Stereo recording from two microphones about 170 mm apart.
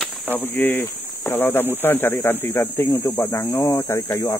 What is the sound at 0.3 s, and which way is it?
Speech, 10° left (ahead or behind).